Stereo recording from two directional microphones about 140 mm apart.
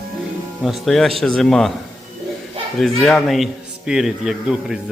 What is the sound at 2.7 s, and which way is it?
Speech, centre (ahead or behind).